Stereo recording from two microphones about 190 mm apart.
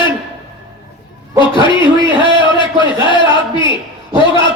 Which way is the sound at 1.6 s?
25° left (ahead or behind).